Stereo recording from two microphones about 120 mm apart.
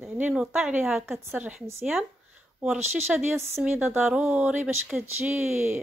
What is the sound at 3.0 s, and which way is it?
Speech, 15° right (ahead or behind).